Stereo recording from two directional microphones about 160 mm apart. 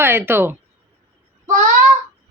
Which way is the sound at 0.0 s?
15° right (ahead or behind).